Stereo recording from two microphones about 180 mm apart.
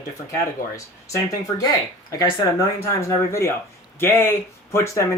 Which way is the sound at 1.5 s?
20° left (ahead or behind).